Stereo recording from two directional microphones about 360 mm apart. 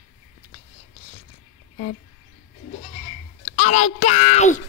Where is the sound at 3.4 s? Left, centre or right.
Centre.